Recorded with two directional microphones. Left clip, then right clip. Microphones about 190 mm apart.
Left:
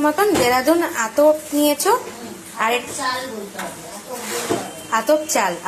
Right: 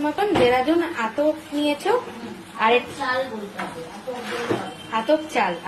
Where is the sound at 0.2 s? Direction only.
25° left (ahead or behind).